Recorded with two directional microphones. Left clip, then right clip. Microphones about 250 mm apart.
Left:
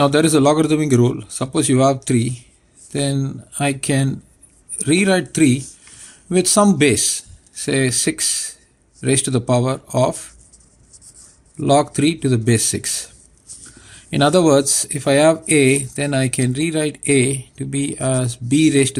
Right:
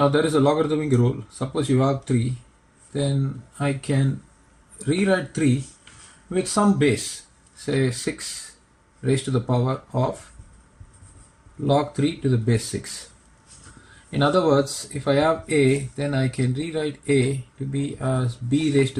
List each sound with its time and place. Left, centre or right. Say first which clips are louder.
0.0 s speech: left 5 dB; left
11.6 s speech: left 6 dB; left
14.1 s speech: left 6 dB; left